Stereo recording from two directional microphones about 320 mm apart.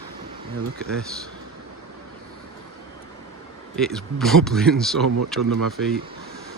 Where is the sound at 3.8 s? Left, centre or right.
Centre.